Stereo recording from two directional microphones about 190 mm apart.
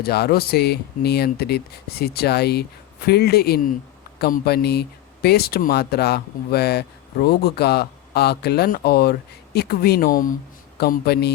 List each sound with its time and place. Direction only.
0.0 s speech: 55° left (ahead or behind)